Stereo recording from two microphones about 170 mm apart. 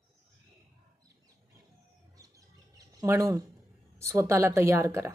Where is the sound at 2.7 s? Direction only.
20° right (ahead or behind).